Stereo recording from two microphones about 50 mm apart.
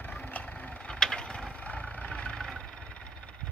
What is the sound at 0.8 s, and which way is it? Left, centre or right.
Mechanisms, centre.